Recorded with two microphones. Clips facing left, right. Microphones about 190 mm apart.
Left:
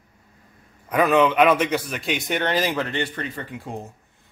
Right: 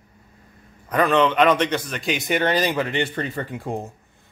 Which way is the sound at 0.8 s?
5° left (ahead or behind).